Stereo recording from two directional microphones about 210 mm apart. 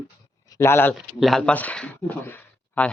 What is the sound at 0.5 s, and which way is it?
Speech, 10° left (ahead or behind).